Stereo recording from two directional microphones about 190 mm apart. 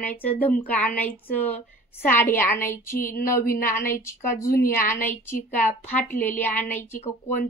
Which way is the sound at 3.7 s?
15° left (ahead or behind).